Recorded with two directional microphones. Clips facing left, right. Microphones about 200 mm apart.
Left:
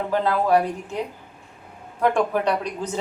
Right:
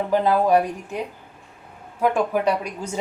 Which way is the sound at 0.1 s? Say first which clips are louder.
Right 2 dB; 15° right (ahead or behind).